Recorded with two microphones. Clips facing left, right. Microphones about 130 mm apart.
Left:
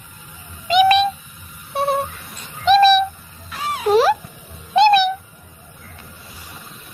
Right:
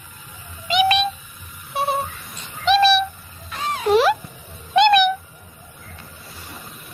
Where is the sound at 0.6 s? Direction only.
45° left (ahead or behind).